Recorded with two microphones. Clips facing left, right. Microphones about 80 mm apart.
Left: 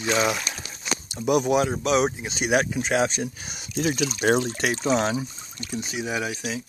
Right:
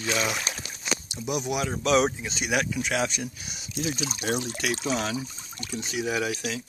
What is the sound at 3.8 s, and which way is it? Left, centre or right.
Speech, left.